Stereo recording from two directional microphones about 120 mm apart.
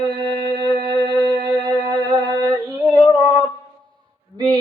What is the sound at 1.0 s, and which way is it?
Music, 40° right (ahead or behind).